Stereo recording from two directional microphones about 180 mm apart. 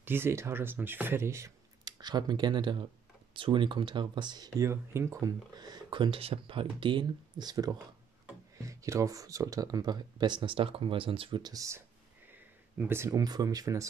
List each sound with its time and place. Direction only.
0.0 s speech: 10° right (ahead or behind)